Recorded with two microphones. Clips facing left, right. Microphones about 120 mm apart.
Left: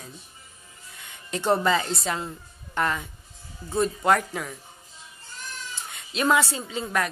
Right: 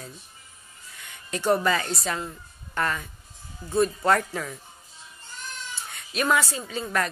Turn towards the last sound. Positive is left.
turn(degrees=25)  # may be behind; listen again after turning